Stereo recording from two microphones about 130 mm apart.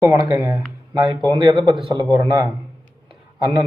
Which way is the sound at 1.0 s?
35° right (ahead or behind).